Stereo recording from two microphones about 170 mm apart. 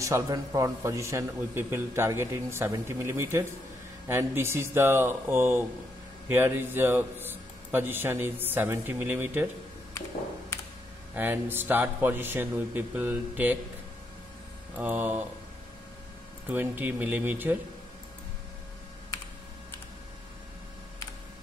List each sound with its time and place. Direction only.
0.0 s a man's voice: 20° right (ahead or behind)
11.1 s a man's voice: 10° right (ahead or behind)
14.8 s a man's voice: 10° right (ahead or behind)
16.4 s a man's voice: 10° right (ahead or behind)